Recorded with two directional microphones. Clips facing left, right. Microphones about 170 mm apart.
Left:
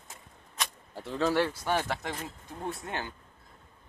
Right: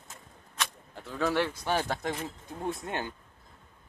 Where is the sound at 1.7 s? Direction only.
15° right (ahead or behind).